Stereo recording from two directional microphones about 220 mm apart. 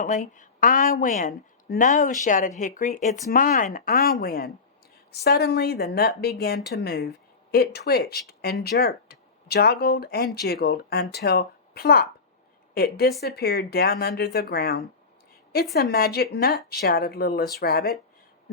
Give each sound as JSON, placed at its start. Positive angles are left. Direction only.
{"t": 0.0, "sound": "a woman's voice", "side_deg": 35}